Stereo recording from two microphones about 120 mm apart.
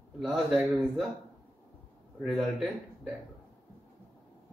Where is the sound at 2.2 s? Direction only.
5° right (ahead or behind).